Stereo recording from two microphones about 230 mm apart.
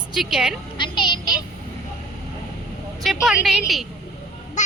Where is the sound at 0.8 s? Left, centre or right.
Centre.